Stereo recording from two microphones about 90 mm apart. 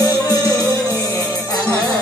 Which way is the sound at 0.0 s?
45° left (ahead or behind).